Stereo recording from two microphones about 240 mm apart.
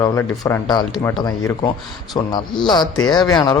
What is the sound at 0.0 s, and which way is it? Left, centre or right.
Speech, centre.